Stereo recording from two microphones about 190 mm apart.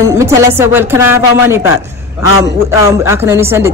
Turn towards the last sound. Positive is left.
turn(degrees=-15)  # may be behind; listen again after turning